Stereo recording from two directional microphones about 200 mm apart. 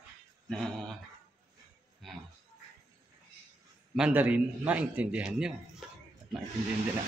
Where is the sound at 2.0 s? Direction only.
Centre (ahead or behind).